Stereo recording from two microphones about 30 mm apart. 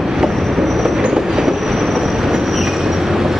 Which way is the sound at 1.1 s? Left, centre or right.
Centre.